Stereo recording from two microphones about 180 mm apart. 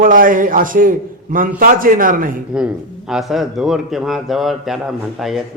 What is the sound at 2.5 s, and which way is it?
A man's voice, 5° right (ahead or behind).